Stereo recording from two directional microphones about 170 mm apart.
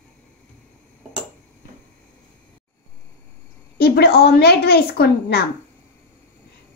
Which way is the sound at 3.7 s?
65° left (ahead or behind).